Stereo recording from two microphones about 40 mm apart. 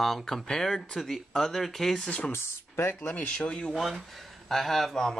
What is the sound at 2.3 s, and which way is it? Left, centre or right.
Speech, left.